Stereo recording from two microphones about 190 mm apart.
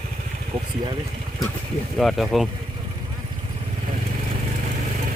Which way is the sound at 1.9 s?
Centre (ahead or behind).